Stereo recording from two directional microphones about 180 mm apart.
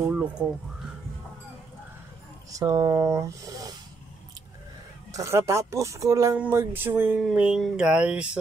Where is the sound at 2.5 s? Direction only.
20° right (ahead or behind).